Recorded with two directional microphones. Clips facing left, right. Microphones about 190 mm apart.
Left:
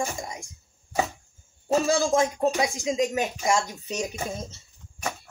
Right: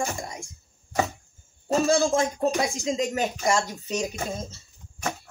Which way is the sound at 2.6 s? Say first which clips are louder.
Left 1 dB; 15° left (ahead or behind).